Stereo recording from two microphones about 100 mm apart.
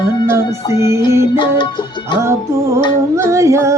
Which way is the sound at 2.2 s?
30° right (ahead or behind).